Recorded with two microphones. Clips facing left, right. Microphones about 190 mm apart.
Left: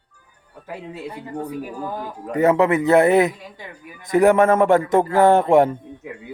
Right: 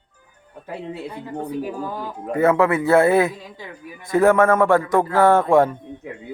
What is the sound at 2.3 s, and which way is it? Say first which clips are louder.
A man's voice: left 1 dB; 20° left (ahead or behind).